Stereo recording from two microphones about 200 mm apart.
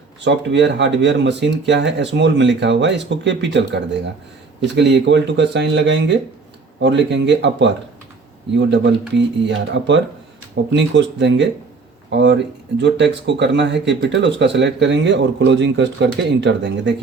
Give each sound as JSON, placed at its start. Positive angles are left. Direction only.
{"t": 0.3, "sound": "speech", "side_deg": -60}